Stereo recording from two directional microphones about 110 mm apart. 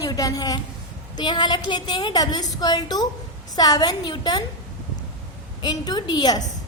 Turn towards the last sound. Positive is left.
turn(degrees=40)  # may be behind; listen again after turning